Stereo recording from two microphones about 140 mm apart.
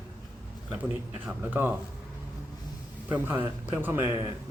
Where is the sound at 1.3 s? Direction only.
15° right (ahead or behind).